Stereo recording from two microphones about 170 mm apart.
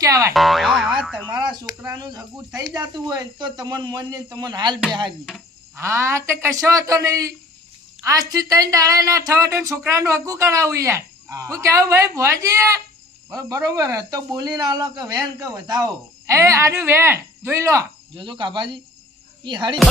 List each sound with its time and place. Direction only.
0.0 s speech: 20° right (ahead or behind)
0.3 s boing: centre (ahead or behind)
1.3 s a sound: 25° right (ahead or behind)
2.6 s speech: 20° right (ahead or behind)
5.7 s speech: 15° right (ahead or behind)